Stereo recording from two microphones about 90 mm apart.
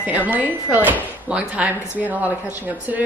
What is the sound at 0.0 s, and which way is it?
Speech, 20° right (ahead or behind).